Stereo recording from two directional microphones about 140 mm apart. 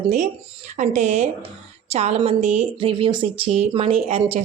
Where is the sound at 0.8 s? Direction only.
55° right (ahead or behind).